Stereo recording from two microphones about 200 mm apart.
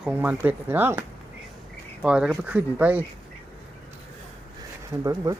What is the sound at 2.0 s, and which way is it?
Speech, 5° right (ahead or behind).